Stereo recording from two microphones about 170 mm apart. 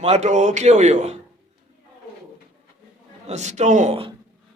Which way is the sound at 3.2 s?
45° right (ahead or behind).